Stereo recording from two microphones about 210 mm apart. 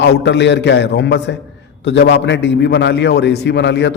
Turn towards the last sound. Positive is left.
turn(degrees=55)  # may be behind; listen again after turning